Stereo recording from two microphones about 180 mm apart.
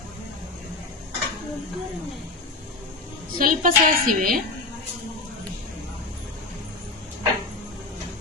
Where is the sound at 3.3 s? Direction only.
50° right (ahead or behind).